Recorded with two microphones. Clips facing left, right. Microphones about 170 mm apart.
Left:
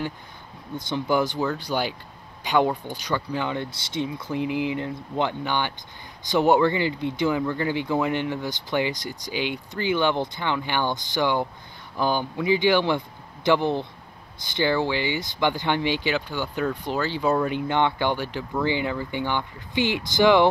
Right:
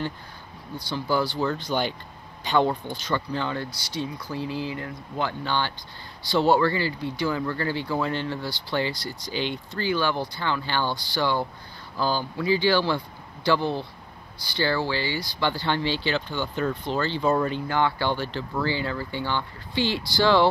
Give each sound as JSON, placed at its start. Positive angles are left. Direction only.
{"t": 0.7, "sound": "speech", "side_deg": 20}